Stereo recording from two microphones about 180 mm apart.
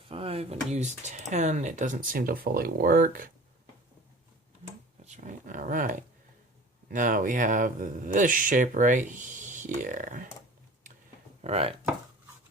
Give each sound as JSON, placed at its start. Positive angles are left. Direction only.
{"t": 0.1, "sound": "speech", "side_deg": -35}
{"t": 5.0, "sound": "speech", "side_deg": -45}
{"t": 11.4, "sound": "speech", "side_deg": -35}